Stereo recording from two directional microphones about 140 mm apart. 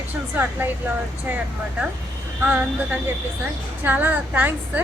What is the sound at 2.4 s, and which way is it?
A woman's voice, 15° right (ahead or behind).